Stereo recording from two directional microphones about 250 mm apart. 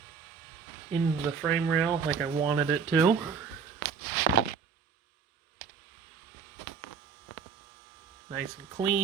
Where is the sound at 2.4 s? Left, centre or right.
Centre.